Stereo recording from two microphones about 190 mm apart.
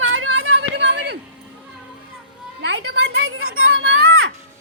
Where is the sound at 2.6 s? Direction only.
70° right (ahead or behind); by 4.3 s 90° right.